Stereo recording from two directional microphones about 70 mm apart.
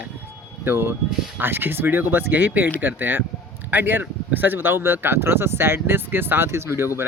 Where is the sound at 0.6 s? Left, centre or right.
Right.